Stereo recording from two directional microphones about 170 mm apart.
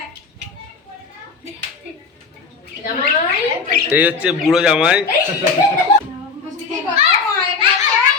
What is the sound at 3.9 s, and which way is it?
A man's voice, 10° right (ahead or behind).